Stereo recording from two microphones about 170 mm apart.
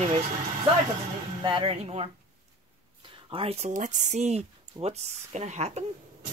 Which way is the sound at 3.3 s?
35° right (ahead or behind).